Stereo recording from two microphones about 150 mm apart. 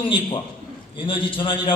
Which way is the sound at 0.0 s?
35° left (ahead or behind).